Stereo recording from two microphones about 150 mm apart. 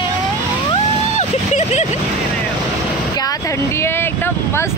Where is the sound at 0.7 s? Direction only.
45° left (ahead or behind).